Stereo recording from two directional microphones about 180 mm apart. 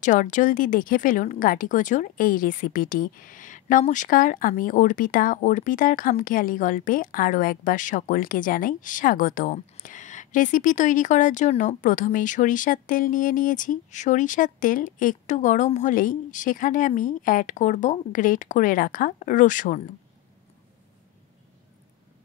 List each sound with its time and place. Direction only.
0.0 s speech: 45° left (ahead or behind)